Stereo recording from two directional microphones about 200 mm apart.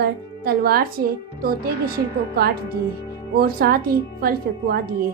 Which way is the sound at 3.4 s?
50° right (ahead or behind).